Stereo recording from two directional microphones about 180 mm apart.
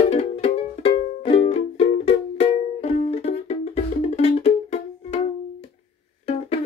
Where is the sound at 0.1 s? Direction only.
35° left (ahead or behind).